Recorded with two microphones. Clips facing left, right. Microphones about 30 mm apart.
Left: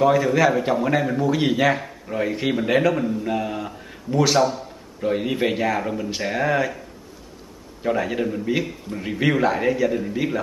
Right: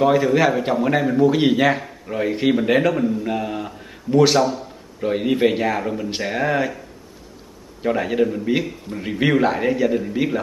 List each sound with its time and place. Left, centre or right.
0.0 s a man's voice: centre
7.8 s a man's voice: centre